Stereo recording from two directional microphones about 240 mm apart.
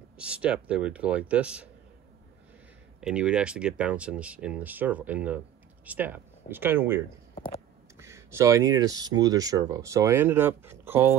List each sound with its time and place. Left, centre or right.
0.2 s speech: centre
3.0 s speech: centre
7.3 s a sound: centre
8.0 s speech: centre